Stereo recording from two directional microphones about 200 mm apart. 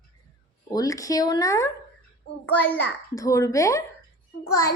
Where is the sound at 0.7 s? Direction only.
15° left (ahead or behind).